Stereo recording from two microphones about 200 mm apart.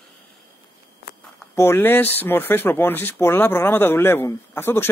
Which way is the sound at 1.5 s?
10° left (ahead or behind).